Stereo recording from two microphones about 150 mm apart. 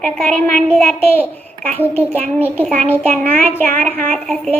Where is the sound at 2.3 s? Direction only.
10° left (ahead or behind).